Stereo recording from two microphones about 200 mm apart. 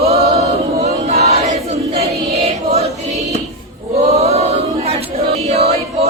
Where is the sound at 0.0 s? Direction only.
30° right (ahead or behind).